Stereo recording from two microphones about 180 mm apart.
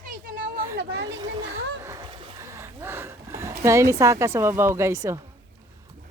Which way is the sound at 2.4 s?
15° right (ahead or behind).